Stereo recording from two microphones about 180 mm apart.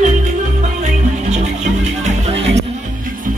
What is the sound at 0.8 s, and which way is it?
Music, 40° right (ahead or behind).